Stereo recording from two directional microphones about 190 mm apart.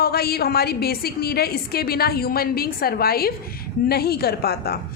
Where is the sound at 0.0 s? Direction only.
55° left (ahead or behind).